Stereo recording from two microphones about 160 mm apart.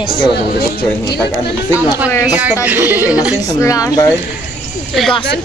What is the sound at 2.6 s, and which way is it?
Speech, 10° right (ahead or behind).